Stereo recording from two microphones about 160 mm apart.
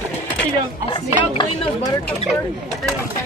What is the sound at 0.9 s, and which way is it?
Speech, 25° left (ahead or behind).